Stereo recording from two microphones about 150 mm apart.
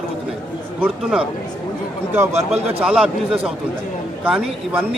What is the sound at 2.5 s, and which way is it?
A man's voice, 5° right (ahead or behind).